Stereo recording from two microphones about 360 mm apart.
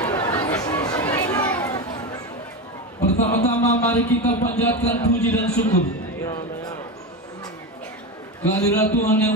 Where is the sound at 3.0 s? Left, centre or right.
Centre.